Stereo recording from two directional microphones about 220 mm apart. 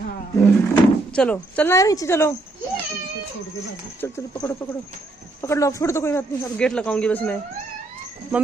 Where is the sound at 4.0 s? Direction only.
15° left (ahead or behind).